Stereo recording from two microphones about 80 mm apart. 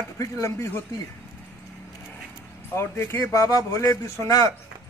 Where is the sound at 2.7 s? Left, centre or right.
Left.